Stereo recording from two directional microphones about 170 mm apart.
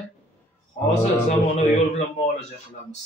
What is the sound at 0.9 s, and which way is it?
Speech, 40° left (ahead or behind).